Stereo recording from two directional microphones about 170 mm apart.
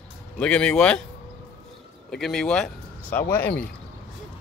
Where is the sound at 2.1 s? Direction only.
Centre (ahead or behind).